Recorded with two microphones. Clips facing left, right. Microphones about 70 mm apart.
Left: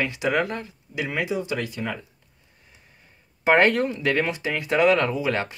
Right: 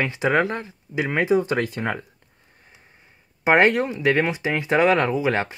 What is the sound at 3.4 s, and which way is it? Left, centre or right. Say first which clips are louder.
Speech: right 1 dB; centre.